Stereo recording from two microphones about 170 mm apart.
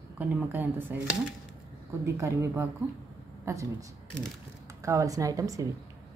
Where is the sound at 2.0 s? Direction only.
15° right (ahead or behind).